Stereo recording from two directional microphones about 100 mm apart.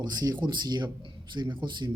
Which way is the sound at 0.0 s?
40° right (ahead or behind).